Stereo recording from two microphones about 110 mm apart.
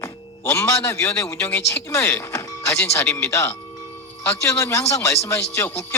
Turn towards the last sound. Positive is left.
turn(degrees=25)  # may be behind; listen again after turning